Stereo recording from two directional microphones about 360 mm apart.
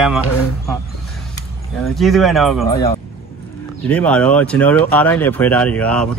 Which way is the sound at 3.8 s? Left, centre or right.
Centre.